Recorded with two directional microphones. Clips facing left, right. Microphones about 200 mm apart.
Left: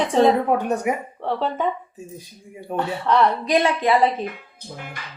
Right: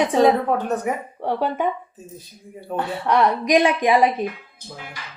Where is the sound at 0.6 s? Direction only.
10° left (ahead or behind).